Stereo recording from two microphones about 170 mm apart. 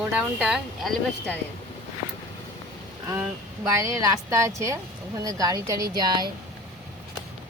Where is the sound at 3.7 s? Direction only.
20° right (ahead or behind).